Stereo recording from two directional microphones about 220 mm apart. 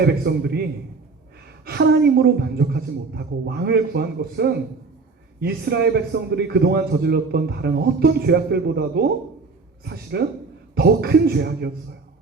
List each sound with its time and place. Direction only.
0.0 s a man's voice: 45° right (ahead or behind)